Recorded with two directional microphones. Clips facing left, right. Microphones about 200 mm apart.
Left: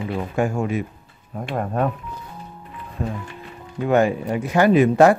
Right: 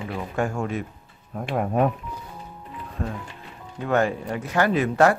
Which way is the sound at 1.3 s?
5° right (ahead or behind).